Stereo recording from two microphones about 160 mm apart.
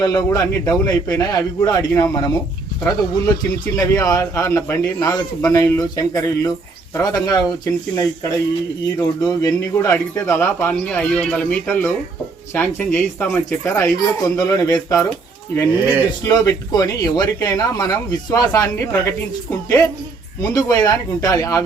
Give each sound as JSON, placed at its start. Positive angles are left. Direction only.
{"t": 0.0, "sound": "speech", "side_deg": 20}
{"t": 15.7, "sound": "speech", "side_deg": -10}
{"t": 16.2, "sound": "speech", "side_deg": 20}